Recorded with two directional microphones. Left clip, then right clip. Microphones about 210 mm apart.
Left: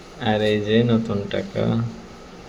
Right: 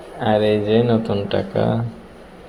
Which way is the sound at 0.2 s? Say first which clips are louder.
Right 4 dB; 5° right (ahead or behind).